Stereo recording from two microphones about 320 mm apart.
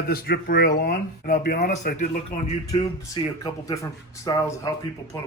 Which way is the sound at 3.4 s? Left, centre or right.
Centre.